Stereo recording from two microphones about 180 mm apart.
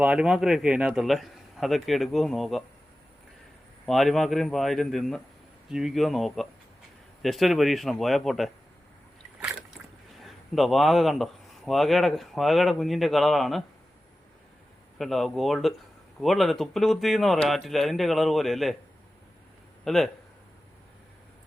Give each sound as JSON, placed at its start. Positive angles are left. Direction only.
{"t": 0.0, "sound": "speech", "side_deg": -5}
{"t": 3.8, "sound": "speech", "side_deg": 0}
{"t": 10.2, "sound": "speech", "side_deg": 0}
{"t": 14.9, "sound": "speech", "side_deg": 0}
{"t": 19.8, "sound": "speech", "side_deg": 0}